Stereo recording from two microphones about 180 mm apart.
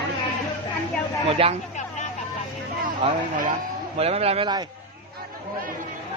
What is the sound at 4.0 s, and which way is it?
Speech, 35° right (ahead or behind).